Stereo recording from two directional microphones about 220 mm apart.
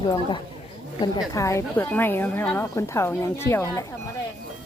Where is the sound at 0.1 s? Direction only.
20° left (ahead or behind).